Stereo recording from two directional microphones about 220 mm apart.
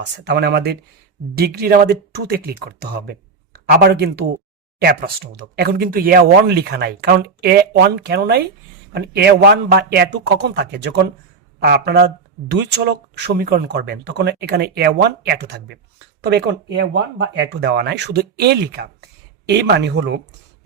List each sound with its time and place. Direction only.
0.3 s speech: 50° right (ahead or behind)